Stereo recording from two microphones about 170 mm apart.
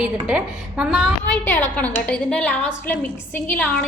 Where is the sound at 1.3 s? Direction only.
15° left (ahead or behind).